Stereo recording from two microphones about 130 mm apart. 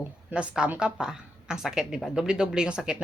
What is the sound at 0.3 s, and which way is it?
A woman's voice, 10° right (ahead or behind).